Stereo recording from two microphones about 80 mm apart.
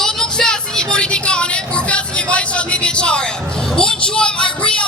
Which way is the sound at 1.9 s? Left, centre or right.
Centre.